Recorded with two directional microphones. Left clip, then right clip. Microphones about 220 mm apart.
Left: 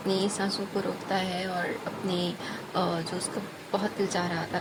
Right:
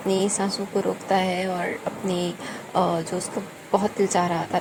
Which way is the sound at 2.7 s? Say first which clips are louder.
Right 7 dB; 15° right (ahead or behind).